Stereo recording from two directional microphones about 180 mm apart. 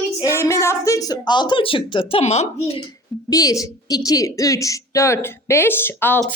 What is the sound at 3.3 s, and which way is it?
A woman's voice, 20° left (ahead or behind).